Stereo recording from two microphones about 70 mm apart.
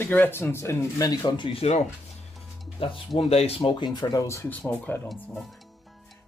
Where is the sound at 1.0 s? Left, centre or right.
Left.